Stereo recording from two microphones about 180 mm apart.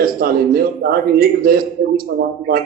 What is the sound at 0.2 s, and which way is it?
A man's voice, 55° right (ahead or behind).